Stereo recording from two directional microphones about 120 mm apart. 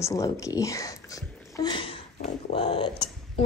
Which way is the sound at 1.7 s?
50° left (ahead or behind).